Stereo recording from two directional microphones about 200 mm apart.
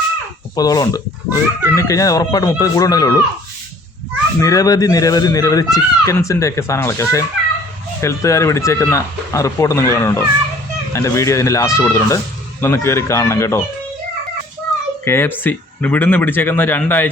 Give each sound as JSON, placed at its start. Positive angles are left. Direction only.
{"t": 0.5, "sound": "speech", "side_deg": 20}
{"t": 4.4, "sound": "speech", "side_deg": 15}
{"t": 15.0, "sound": "speech", "side_deg": 10}